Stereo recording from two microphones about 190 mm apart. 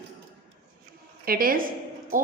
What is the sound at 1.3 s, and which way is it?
Speech, 50° right (ahead or behind).